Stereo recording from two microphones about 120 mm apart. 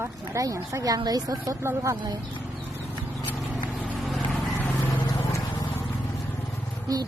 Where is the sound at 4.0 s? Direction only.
Centre (ahead or behind).